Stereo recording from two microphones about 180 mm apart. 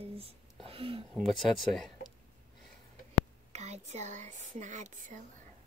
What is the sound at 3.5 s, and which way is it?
Speech, 40° right (ahead or behind).